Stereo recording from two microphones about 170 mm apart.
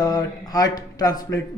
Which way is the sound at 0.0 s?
20° left (ahead or behind).